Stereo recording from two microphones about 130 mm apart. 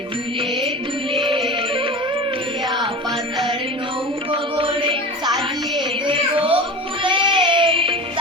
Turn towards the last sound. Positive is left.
turn(degrees=-40)  # may be behind; listen again after turning